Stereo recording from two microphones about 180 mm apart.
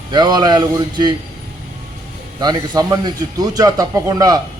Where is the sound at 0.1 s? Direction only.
25° right (ahead or behind).